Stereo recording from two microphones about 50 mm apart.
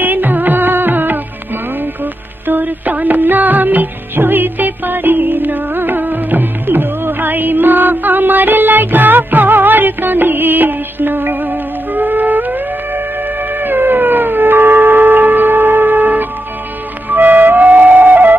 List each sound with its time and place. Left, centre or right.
0.0 s music: right
2.4 s music: right
13.6 s howl: right
17.1 s flute: right